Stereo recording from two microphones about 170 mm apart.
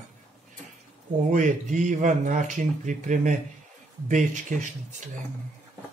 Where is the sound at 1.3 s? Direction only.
50° right (ahead or behind).